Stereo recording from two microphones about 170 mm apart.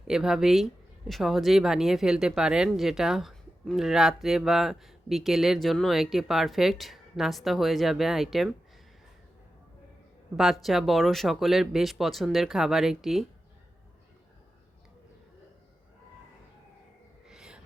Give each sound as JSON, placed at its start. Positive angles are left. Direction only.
{"t": 0.1, "sound": "speech", "side_deg": -5}
{"t": 10.3, "sound": "speech", "side_deg": 0}
{"t": 17.2, "sound": "a sound", "side_deg": -5}